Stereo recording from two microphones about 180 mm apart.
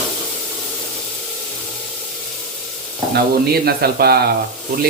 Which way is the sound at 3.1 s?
60° right (ahead or behind).